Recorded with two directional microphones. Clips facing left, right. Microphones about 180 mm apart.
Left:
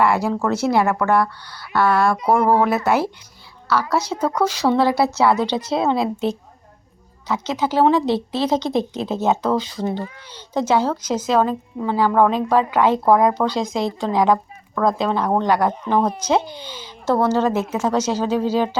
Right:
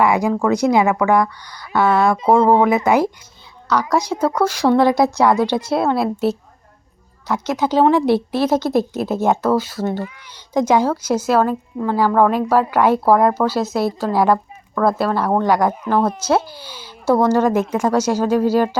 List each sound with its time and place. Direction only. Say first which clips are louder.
0.0 s a woman's voice: right 2 dB; 15° right (ahead or behind)
7.4 s a woman's voice: right 2 dB; 15° right (ahead or behind)